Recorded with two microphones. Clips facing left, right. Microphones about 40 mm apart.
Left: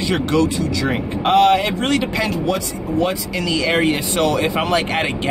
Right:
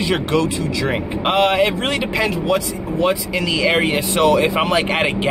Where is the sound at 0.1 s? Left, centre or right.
Centre.